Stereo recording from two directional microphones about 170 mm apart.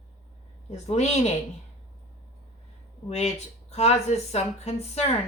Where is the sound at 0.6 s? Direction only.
40° left (ahead or behind).